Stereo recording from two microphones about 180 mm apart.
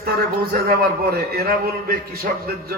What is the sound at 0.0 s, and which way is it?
A man's voice, 55° right (ahead or behind).